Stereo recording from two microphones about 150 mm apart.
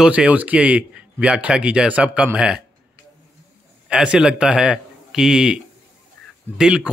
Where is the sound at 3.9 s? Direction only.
5° right (ahead or behind).